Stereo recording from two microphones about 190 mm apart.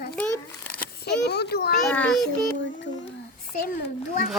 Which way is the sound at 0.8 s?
60° left (ahead or behind).